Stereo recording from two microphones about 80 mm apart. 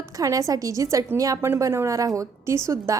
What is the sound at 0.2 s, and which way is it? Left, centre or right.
A woman's voice, right.